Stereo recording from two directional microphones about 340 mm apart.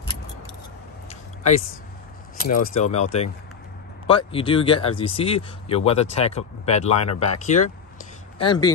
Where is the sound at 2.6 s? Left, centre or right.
Centre.